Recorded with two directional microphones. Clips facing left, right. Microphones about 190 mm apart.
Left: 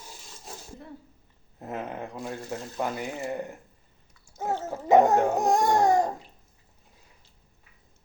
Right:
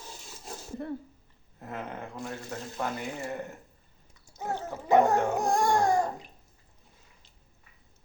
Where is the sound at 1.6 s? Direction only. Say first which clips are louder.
Left 4 dB; 20° left (ahead or behind).